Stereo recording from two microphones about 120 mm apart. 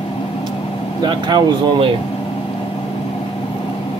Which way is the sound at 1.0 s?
40° right (ahead or behind).